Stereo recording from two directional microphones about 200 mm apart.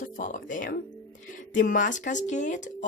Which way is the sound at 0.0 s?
40° left (ahead or behind).